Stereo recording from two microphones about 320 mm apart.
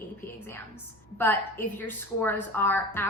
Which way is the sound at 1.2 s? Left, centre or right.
Centre.